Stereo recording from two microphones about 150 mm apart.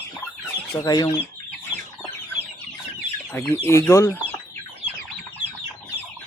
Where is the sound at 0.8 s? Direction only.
25° left (ahead or behind).